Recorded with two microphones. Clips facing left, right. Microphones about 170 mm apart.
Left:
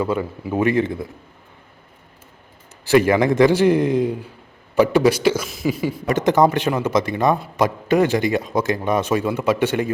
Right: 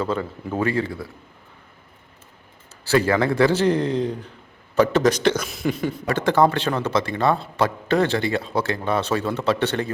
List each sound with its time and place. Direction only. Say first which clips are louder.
0.0 s a man's voice: left 3 dB; 10° left (ahead or behind)
2.8 s a man's voice: left 4 dB; 15° left (ahead or behind)
6.1 s a man's voice: left 2 dB; 15° left (ahead or behind)